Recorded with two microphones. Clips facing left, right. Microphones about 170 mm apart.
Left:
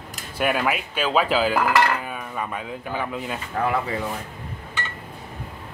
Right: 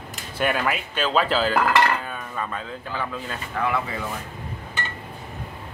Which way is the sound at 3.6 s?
40° left (ahead or behind).